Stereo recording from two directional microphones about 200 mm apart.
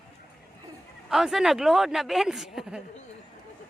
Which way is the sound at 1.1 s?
Centre (ahead or behind).